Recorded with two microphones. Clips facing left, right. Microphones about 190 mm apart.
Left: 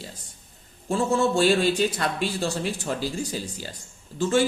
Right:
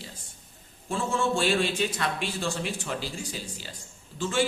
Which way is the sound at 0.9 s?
40° left (ahead or behind).